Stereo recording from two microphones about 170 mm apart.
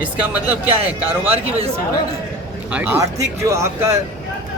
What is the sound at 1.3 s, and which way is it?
Speech, 35° right (ahead or behind).